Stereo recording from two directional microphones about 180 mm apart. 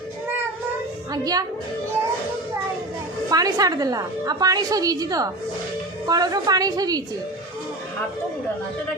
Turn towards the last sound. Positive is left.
turn(degrees=-20)  # may be behind; listen again after turning